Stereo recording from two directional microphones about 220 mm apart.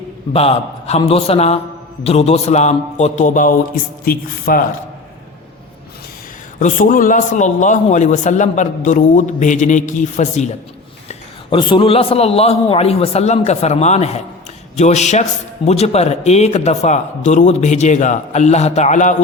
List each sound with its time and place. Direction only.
0.3 s a man's voice: 30° left (ahead or behind)
6.6 s a man's voice: 35° left (ahead or behind)